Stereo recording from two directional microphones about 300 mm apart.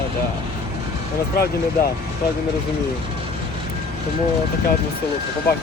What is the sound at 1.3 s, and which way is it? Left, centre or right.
Speech, left.